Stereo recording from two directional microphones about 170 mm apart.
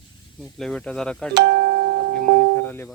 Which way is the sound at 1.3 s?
80° right.